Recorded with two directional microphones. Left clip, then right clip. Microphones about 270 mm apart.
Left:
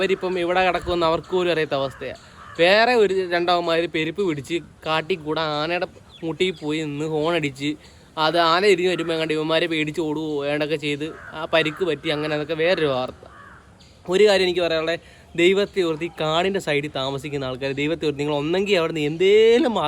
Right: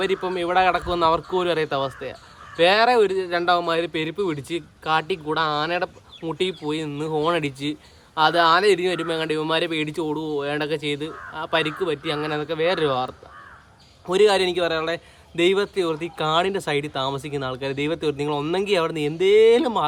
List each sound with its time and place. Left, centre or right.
0.0 s speech: centre
14.1 s speech: centre